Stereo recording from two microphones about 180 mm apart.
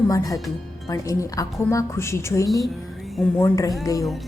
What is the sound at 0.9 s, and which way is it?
A woman's voice, 20° left (ahead or behind).